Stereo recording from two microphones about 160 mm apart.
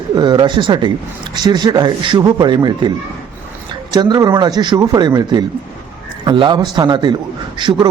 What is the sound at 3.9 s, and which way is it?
Speech, 25° right (ahead or behind).